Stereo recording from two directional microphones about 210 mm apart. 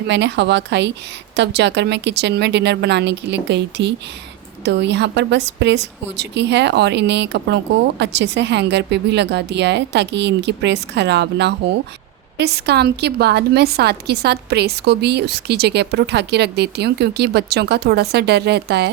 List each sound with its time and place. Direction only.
0.1 s a woman's voice: 55° right (ahead or behind)